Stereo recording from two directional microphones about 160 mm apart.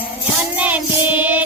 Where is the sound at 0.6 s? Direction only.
10° right (ahead or behind).